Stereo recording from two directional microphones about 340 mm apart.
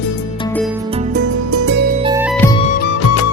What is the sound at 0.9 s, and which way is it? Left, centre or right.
Music, right.